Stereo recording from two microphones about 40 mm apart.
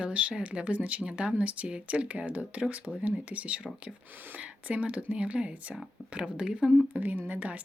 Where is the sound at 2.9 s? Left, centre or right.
Centre.